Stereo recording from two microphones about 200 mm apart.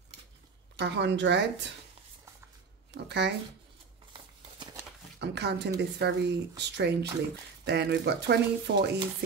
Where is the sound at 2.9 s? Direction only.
55° right (ahead or behind).